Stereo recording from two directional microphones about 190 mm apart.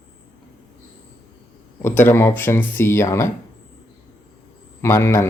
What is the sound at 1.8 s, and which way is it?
Speech, 10° left (ahead or behind).